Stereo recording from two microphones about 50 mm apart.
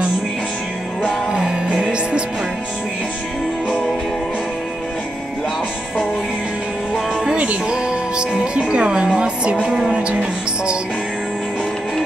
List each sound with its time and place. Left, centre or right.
1.3 s music: centre
7.7 s music: centre